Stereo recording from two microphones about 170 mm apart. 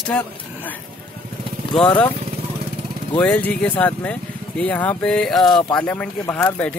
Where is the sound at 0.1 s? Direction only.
5° left (ahead or behind).